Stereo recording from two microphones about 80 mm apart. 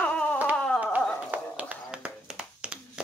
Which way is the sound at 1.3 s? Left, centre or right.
Centre.